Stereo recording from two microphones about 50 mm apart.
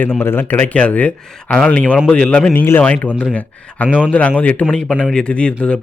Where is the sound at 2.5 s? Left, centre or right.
Left.